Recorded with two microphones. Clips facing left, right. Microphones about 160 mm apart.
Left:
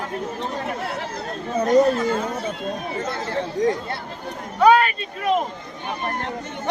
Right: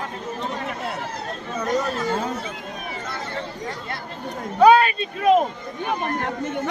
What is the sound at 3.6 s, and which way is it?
Speech, 90° left.